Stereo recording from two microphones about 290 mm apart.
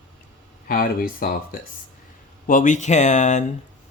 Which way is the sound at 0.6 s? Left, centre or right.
Left.